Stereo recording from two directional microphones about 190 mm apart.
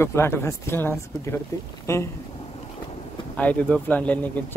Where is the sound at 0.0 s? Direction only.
15° left (ahead or behind).